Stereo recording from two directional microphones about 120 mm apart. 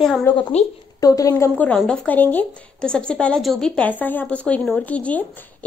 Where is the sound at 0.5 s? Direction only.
65° left (ahead or behind).